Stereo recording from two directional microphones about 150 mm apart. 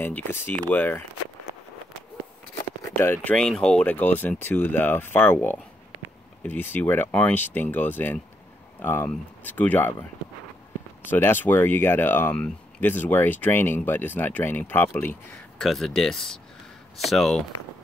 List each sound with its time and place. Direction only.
0.0 s speech: 15° left (ahead or behind)
3.0 s speech: 15° left (ahead or behind)
3.3 s speech: 5° left (ahead or behind)
11.1 s speech: 15° left (ahead or behind)
15.6 s speech: centre (ahead or behind)